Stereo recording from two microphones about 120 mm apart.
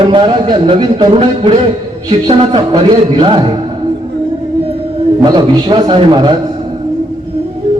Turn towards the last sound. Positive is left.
turn(degrees=-40)  # may be behind; listen again after turning